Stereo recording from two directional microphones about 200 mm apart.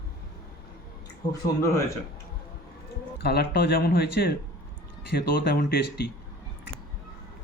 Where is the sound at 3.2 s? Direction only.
55° left (ahead or behind).